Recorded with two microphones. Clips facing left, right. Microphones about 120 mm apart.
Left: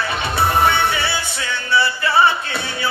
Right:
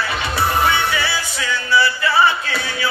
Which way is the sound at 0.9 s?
25° left (ahead or behind).